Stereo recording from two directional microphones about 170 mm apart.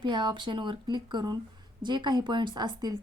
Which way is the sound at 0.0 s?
25° right (ahead or behind).